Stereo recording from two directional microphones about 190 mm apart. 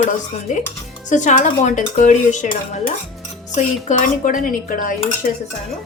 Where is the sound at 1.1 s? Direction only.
40° left (ahead or behind).